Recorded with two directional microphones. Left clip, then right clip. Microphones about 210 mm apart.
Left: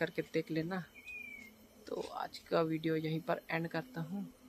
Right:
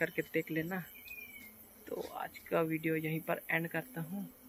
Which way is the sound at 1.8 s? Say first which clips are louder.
Even; 5° left (ahead or behind).